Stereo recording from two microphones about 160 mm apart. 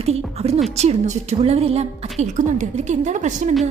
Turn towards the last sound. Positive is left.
turn(degrees=-50)  # may be behind; listen again after turning